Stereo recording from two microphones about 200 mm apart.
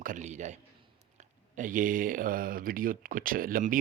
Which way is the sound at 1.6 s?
40° right (ahead or behind).